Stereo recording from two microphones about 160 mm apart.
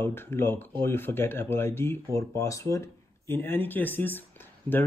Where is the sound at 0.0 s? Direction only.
15° left (ahead or behind).